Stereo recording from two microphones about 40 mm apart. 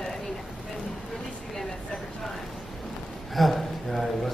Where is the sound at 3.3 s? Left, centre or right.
Centre.